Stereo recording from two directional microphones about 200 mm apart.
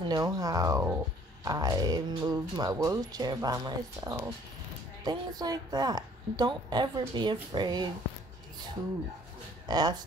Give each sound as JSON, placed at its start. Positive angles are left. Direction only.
{"t": 0.1, "sound": "speech", "side_deg": -20}
{"t": 9.7, "sound": "speech", "side_deg": -20}